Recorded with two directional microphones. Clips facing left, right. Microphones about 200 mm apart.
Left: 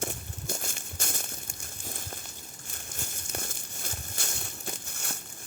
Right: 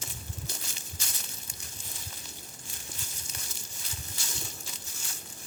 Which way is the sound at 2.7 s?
50° left (ahead or behind).